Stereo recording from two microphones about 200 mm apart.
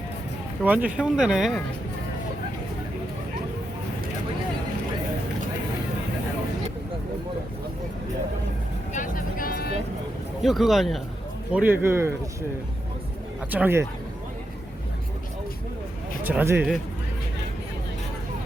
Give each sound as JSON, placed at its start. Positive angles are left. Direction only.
{"t": 0.6, "sound": "speech", "side_deg": -5}
{"t": 8.9, "sound": "vehicle", "side_deg": 40}
{"t": 10.4, "sound": "speech", "side_deg": 0}
{"t": 13.5, "sound": "speech", "side_deg": -10}
{"t": 16.2, "sound": "speech", "side_deg": -10}